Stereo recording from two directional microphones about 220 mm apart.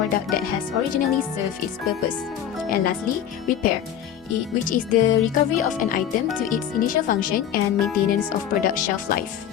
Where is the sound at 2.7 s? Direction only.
40° left (ahead or behind).